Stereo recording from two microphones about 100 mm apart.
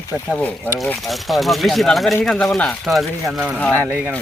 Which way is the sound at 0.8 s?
Centre (ahead or behind).